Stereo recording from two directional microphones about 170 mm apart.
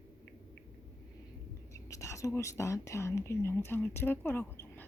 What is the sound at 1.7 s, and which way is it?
Speech, 20° left (ahead or behind).